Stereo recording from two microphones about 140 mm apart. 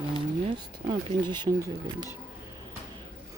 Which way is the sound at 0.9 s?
30° right (ahead or behind).